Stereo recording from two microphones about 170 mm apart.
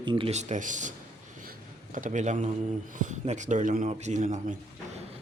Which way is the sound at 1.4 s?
50° right (ahead or behind).